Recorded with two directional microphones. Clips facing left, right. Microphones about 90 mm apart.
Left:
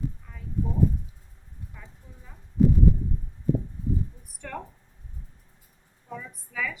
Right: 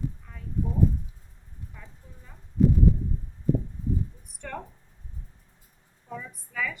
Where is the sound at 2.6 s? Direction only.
5° left (ahead or behind).